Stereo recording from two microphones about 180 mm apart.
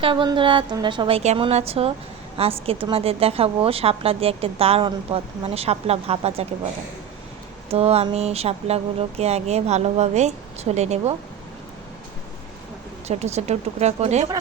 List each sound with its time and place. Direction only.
0.0 s a woman's voice: 25° right (ahead or behind)
7.7 s a woman's voice: 35° right (ahead or behind)
13.1 s a woman's voice: 35° right (ahead or behind)